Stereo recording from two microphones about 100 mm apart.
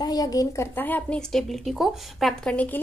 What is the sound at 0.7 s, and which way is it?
Speech, 20° left (ahead or behind).